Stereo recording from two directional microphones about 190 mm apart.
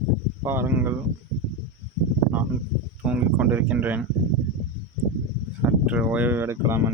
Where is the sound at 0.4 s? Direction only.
10° right (ahead or behind).